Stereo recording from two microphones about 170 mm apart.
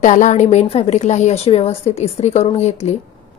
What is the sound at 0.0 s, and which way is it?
A woman's voice, 45° left (ahead or behind).